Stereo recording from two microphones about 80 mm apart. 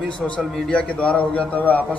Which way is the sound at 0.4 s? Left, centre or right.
Centre.